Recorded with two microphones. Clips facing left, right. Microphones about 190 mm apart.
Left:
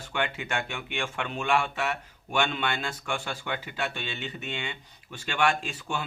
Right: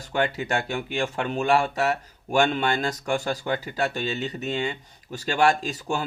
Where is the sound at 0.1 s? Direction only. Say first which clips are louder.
Right 6 dB; 40° right (ahead or behind).